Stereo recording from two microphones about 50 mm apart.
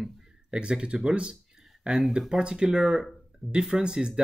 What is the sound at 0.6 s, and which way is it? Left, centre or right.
Speech, right.